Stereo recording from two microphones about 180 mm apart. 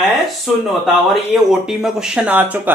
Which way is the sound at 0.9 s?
Centre (ahead or behind).